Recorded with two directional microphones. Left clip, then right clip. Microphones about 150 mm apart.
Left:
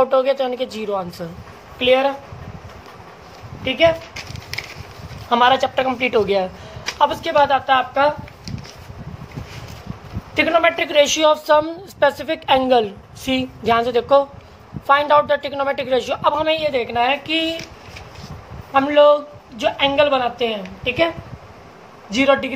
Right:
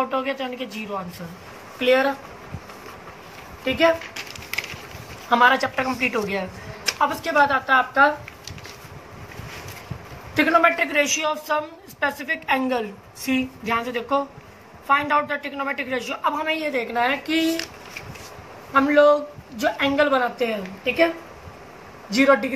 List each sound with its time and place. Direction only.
0.0 s a woman's voice: 90° left
1.8 s speech: 65° left (ahead or behind)
3.6 s speech: 60° left (ahead or behind)
5.3 s speech: 70° left (ahead or behind); by 6.4 s 90° left
7.0 s speech: 60° left (ahead or behind)
10.4 s a woman's voice: 65° left (ahead or behind)
18.7 s a woman's voice: 50° left (ahead or behind)